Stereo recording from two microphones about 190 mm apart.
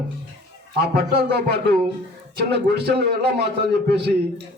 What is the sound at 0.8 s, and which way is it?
A man's voice, 55° right (ahead or behind).